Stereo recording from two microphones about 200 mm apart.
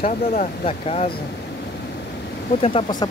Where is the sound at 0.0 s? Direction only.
45° left (ahead or behind).